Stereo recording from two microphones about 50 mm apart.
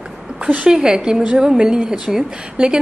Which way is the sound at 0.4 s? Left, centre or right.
Right.